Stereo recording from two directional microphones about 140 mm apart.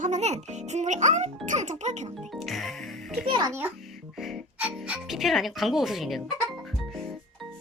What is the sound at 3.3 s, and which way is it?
Speech, 30° right (ahead or behind).